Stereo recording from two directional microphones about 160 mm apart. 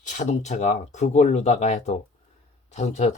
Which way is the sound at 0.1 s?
50° left (ahead or behind).